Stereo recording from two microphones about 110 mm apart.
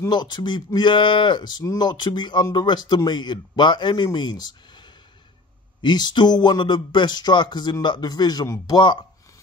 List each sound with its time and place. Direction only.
0.1 s speech: 40° left (ahead or behind)